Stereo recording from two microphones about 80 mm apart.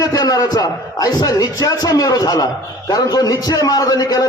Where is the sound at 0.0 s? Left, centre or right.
Left.